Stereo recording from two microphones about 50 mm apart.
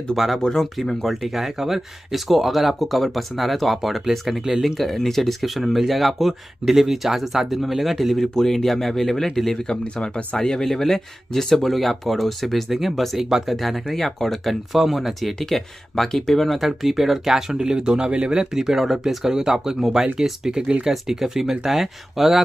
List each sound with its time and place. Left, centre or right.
0.1 s speech: centre
0.4 s speech: centre
1.0 s speech: centre
9.7 s speech: centre